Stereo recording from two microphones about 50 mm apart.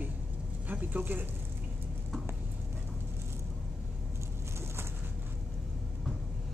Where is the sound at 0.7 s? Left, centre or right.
Right.